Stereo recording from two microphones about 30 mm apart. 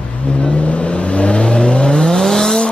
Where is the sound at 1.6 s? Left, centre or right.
Left; by 2.6 s centre.